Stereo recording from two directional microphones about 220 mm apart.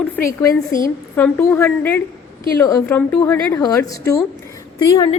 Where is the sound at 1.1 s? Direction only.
10° left (ahead or behind).